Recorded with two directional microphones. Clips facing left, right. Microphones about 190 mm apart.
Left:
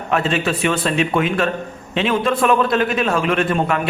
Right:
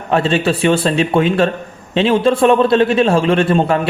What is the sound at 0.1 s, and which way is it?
A man's voice, 30° right (ahead or behind).